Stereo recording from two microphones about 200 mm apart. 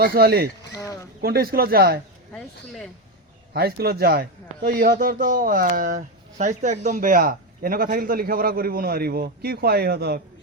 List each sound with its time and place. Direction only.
0.0 s a man's voice: 50° right (ahead or behind)
0.7 s a sound: 15° left (ahead or behind)
1.2 s a man's voice: 50° right (ahead or behind)
2.3 s speech: 5° left (ahead or behind)
3.5 s a man's voice: 50° right (ahead or behind)